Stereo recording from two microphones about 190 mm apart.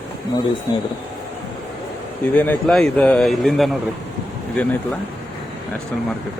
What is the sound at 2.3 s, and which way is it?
Speech, 10° left (ahead or behind).